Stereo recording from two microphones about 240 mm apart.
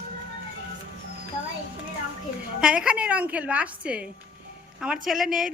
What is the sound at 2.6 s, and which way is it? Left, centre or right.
Speech, centre.